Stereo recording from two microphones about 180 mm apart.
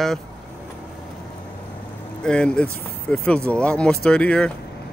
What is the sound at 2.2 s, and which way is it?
Speech, 5° left (ahead or behind).